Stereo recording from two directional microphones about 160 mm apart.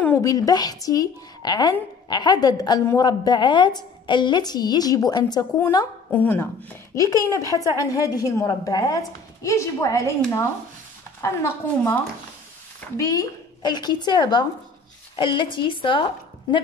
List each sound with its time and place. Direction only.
0.0 s a woman's voice: 20° left (ahead or behind)
6.1 s a woman's voice: 10° left (ahead or behind); by 16.6 s 30° left (ahead or behind)